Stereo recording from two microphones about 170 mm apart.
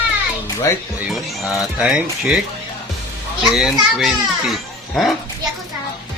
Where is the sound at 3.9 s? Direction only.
Centre (ahead or behind).